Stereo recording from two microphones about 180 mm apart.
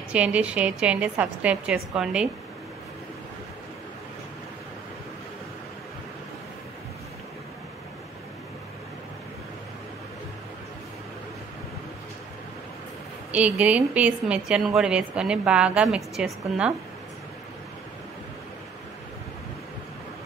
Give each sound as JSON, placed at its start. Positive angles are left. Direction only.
{"t": 0.1, "sound": "a woman's voice", "side_deg": -5}
{"t": 13.3, "sound": "a woman's voice", "side_deg": -5}